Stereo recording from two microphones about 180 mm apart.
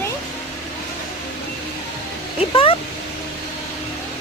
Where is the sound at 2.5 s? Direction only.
30° left (ahead or behind).